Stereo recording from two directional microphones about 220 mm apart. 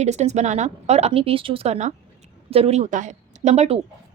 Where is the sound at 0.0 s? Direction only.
30° right (ahead or behind).